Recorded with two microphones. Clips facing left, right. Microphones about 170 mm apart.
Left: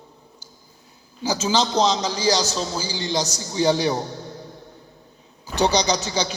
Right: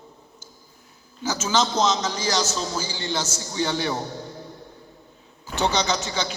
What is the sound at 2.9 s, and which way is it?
A man's voice, 15° left (ahead or behind).